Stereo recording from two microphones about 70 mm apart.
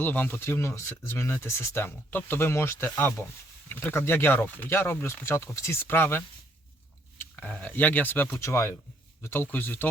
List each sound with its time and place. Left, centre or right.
0.0 s speech: left
5.9 s speech: left
8.4 s speech: left